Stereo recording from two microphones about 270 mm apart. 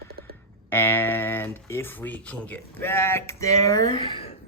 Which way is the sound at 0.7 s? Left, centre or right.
Centre.